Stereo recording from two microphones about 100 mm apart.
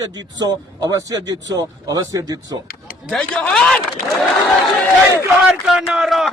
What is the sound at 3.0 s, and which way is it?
Speech, 5° left (ahead or behind).